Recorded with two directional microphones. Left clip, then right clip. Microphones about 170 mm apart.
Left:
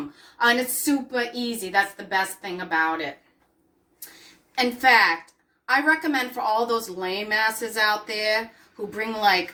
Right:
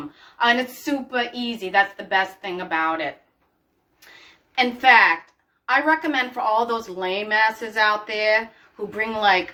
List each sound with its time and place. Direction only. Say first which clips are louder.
0.3 s a woman's voice: right 1 dB; 20° left (ahead or behind)
4.5 s a woman's voice: right 3 dB; 15° left (ahead or behind)